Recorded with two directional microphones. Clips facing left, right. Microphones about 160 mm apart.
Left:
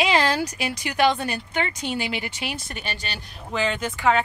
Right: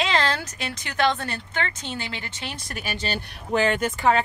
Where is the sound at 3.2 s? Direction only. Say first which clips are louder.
Right 3 dB; 55° right (ahead or behind); by 4.2 s 40° right (ahead or behind).